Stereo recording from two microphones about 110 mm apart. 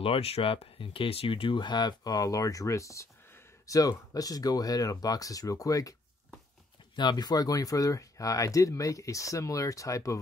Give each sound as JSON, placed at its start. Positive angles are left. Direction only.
{"t": 0.0, "sound": "speech", "side_deg": 65}
{"t": 7.0, "sound": "speech", "side_deg": 40}